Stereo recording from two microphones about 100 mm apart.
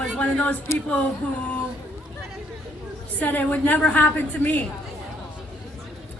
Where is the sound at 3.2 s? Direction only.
15° left (ahead or behind).